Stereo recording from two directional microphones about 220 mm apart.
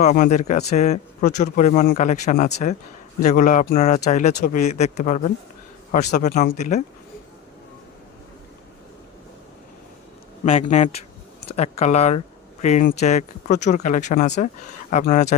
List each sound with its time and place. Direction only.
0.0 s speech: 35° left (ahead or behind)
10.4 s speech: 25° left (ahead or behind)